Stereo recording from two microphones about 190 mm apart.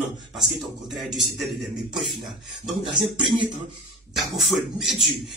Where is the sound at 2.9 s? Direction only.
25° right (ahead or behind).